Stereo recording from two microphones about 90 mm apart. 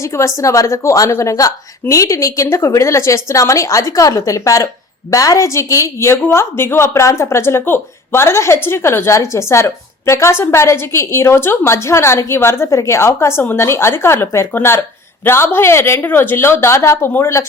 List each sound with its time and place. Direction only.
0.0 s a woman's voice: 30° left (ahead or behind)